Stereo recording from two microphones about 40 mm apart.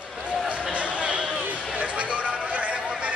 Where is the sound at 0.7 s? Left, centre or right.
Right.